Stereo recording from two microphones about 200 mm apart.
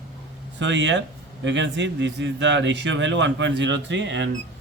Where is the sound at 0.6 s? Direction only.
65° right (ahead or behind).